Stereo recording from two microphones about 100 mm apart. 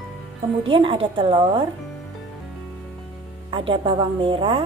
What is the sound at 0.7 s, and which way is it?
Speech, 60° right (ahead or behind).